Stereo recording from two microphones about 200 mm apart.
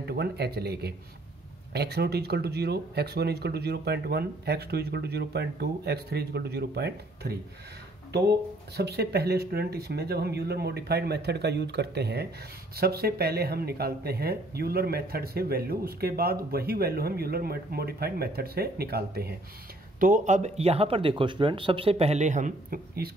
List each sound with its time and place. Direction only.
0.0 s speech: 55° right (ahead or behind)
20.0 s speech: 40° right (ahead or behind)